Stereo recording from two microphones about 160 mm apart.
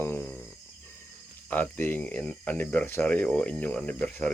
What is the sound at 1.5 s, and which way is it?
Speech, 10° left (ahead or behind).